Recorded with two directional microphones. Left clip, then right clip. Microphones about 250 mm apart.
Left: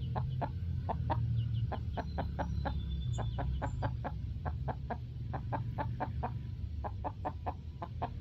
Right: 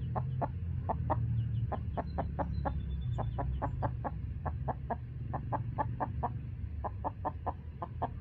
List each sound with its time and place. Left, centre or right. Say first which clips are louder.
0.1 s chicken: right 3 dB; left; by 8.1 s centre